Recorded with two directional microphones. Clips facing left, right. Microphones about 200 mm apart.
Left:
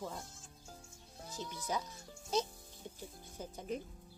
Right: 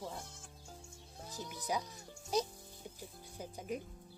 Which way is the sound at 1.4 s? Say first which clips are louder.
Right 1 dB; 15° right (ahead or behind).